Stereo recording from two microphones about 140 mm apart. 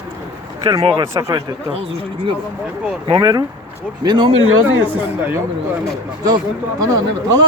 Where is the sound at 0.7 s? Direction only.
40° right (ahead or behind).